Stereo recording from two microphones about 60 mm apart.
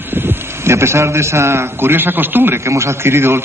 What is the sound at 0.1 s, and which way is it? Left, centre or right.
A man's voice, right.